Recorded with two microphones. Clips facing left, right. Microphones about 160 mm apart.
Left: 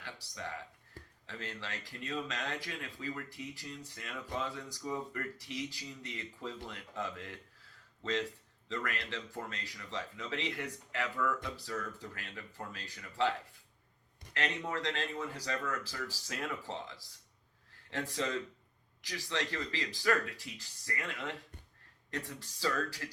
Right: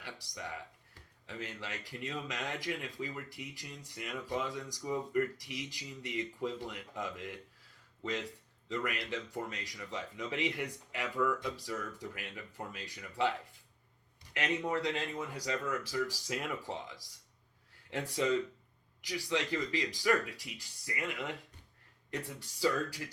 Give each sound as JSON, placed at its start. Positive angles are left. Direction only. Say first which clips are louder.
{"t": 0.0, "sound": "speech", "louder": "even", "side_deg": -15}
{"t": 8.7, "sound": "speech", "louder": "right 2 dB", "side_deg": -15}
{"t": 14.3, "sound": "speech", "louder": "right 3 dB", "side_deg": -15}
{"t": 22.1, "sound": "speech", "louder": "right 1 dB", "side_deg": -15}